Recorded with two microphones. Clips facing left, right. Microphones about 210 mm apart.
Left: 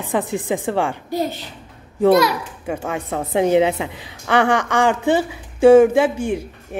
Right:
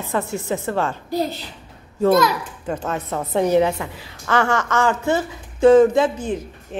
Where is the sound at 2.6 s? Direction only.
10° left (ahead or behind).